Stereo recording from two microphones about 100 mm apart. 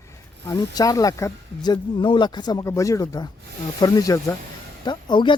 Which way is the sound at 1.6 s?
50° left (ahead or behind).